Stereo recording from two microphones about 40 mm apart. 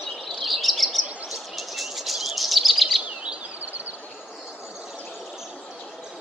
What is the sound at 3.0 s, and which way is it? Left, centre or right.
Bird vocalization, right.